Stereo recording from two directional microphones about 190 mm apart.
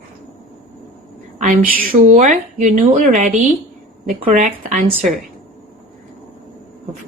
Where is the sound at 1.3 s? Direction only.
45° right (ahead or behind).